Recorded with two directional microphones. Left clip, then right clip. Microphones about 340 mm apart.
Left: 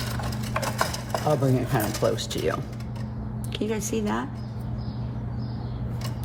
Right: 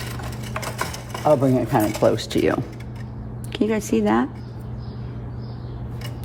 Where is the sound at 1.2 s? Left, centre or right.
Centre.